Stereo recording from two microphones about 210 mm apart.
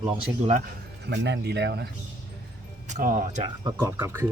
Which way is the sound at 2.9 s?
40° right (ahead or behind).